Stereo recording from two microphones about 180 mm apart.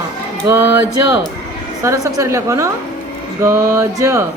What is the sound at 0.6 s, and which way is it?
Speech, 90° left.